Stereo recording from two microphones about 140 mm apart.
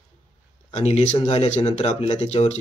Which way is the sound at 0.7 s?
50° left (ahead or behind).